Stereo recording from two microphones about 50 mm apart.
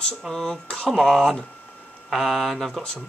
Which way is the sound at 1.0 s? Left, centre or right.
Centre.